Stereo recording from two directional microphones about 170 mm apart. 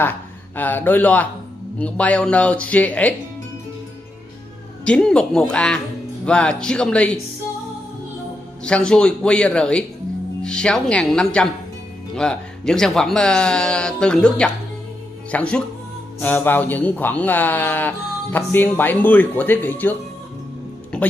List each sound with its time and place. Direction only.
0.0 s a man's voice: 10° left (ahead or behind)
4.8 s speech: 5° left (ahead or behind)
8.6 s speech: 5° left (ahead or behind)
20.9 s music: 5° left (ahead or behind)